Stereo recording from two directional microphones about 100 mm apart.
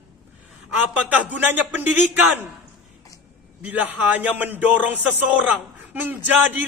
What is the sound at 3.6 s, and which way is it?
Speech, 15° right (ahead or behind).